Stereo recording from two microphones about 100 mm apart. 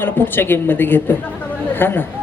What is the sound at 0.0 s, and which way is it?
A woman's voice, 20° left (ahead or behind).